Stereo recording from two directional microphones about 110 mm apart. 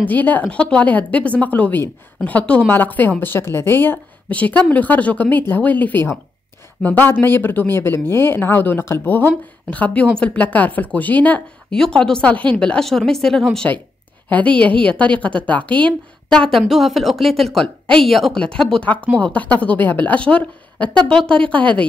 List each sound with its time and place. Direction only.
0.0 s a woman's voice: 15° left (ahead or behind)